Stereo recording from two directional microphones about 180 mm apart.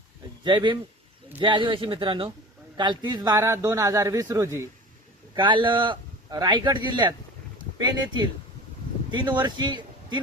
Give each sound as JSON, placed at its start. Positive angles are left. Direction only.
{"t": 0.4, "sound": "a man's voice", "side_deg": -25}